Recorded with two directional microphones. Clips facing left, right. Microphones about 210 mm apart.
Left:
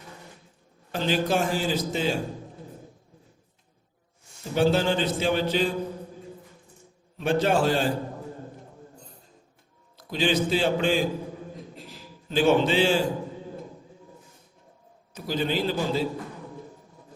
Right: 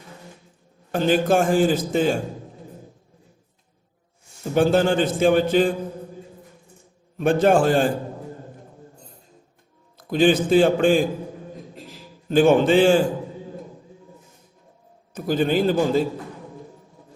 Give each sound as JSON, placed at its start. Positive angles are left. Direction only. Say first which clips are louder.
{"t": 0.9, "sound": "a man's voice", "louder": "right 6 dB", "side_deg": -50}
{"t": 4.5, "sound": "a man's voice", "louder": "right 4 dB", "side_deg": -50}
{"t": 7.2, "sound": "a man's voice", "louder": "right 6 dB", "side_deg": -50}
{"t": 10.1, "sound": "a man's voice", "louder": "right 7 dB", "side_deg": -50}
{"t": 12.3, "sound": "a man's voice", "louder": "right 6 dB", "side_deg": -50}
{"t": 15.1, "sound": "a man's voice", "louder": "right 7 dB", "side_deg": -50}